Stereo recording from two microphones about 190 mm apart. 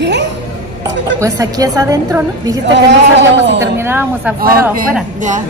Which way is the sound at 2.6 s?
70° right (ahead or behind).